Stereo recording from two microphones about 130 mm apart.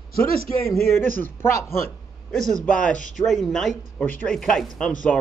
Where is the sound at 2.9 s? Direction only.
80° left.